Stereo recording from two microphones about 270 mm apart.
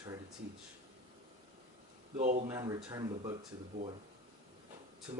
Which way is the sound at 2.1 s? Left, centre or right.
Right.